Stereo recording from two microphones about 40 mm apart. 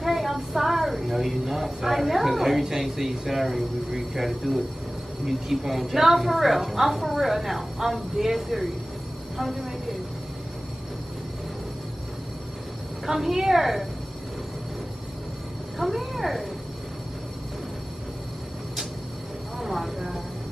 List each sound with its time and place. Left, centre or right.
0.0 s a woman's voice: centre
13.0 s a woman's voice: centre
15.8 s a woman's voice: centre
19.6 s speech: centre